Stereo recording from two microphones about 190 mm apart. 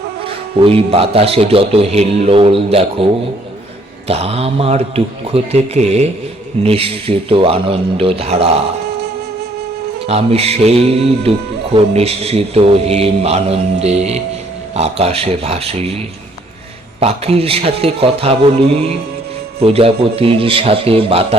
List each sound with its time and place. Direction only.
0.5 s a man's voice: 30° right (ahead or behind)
4.1 s speech: 35° right (ahead or behind)
10.1 s speech: 30° right (ahead or behind)
17.0 s speech: 30° right (ahead or behind)